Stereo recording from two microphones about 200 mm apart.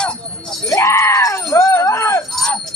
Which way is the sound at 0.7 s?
15° left (ahead or behind).